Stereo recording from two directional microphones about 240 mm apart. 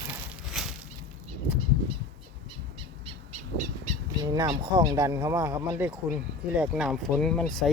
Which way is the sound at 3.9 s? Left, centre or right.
Right.